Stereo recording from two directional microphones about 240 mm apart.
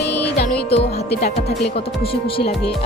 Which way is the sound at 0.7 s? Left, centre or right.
Left.